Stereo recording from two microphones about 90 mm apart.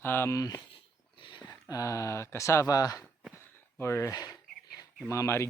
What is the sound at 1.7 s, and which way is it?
Speech, 35° left (ahead or behind).